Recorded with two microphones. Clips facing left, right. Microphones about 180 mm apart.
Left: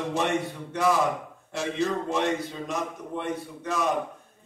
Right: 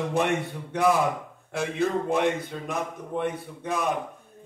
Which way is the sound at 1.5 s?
55° right (ahead or behind).